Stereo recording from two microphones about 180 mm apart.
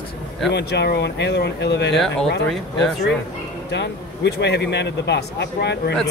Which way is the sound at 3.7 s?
70° left (ahead or behind).